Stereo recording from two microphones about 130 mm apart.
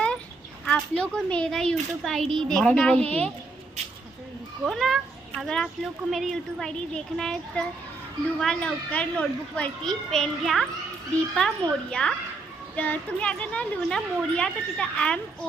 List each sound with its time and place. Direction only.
0.6 s speech: 5° left (ahead or behind)
4.6 s a woman's voice: centre (ahead or behind)